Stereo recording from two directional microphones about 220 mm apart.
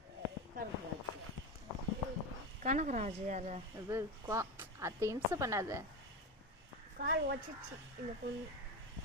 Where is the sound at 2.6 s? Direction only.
35° right (ahead or behind).